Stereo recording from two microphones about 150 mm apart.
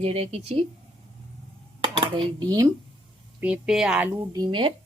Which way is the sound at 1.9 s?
35° right (ahead or behind).